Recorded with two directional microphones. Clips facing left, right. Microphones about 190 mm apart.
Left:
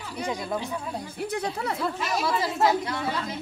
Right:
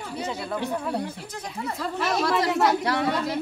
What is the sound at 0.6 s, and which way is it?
Speech, 65° right (ahead or behind).